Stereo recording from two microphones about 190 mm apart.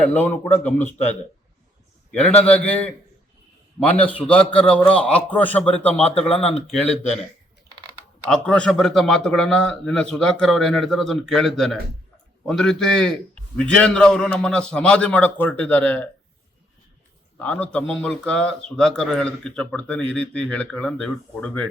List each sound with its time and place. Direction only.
0.0 s a man's voice: 10° left (ahead or behind)
2.1 s a man's voice: 5° left (ahead or behind)
6.1 s speech: 30° left (ahead or behind)
8.2 s a man's voice: 5° left (ahead or behind)
17.4 s a man's voice: 5° left (ahead or behind)